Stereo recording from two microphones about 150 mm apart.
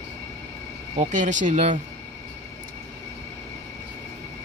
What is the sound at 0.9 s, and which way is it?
Speech, 50° right (ahead or behind).